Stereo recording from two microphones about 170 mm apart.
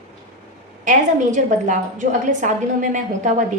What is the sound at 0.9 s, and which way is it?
A woman's voice, 45° right (ahead or behind).